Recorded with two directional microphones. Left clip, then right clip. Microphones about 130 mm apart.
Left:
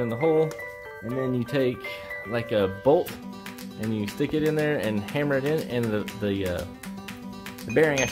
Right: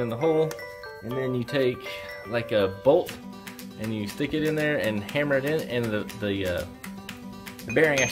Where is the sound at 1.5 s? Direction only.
50° left (ahead or behind).